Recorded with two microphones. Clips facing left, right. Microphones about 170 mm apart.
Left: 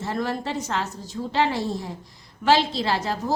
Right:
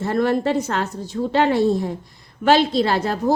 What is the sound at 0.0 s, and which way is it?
A woman's voice, 55° right (ahead or behind).